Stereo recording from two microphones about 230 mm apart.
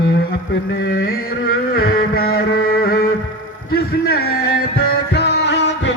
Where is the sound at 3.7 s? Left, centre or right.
Left.